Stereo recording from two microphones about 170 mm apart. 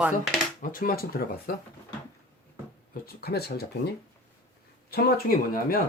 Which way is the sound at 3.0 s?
70° left (ahead or behind).